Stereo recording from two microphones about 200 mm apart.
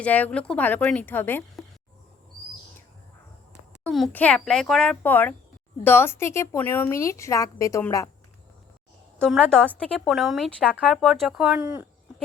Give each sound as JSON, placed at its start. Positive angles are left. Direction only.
{"t": 0.0, "sound": "a woman's voice", "side_deg": 5}
{"t": 3.8, "sound": "a woman's voice", "side_deg": 5}
{"t": 9.1, "sound": "a woman's voice", "side_deg": 5}
{"t": 11.6, "sound": "speech", "side_deg": -15}